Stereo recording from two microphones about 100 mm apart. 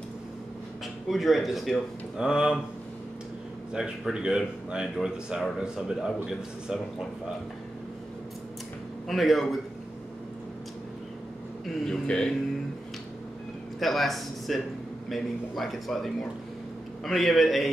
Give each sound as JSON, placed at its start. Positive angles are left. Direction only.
{"t": 1.0, "sound": "speech", "side_deg": 0}
{"t": 3.7, "sound": "speech", "side_deg": -10}
{"t": 9.0, "sound": "speech", "side_deg": 0}
{"t": 11.6, "sound": "speech", "side_deg": 5}
{"t": 13.7, "sound": "speech", "side_deg": 0}